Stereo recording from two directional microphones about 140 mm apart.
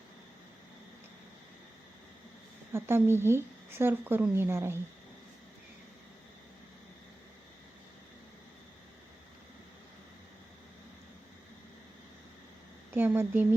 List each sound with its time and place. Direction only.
2.7 s a woman's voice: 15° right (ahead or behind)
12.9 s a woman's voice: 15° right (ahead or behind)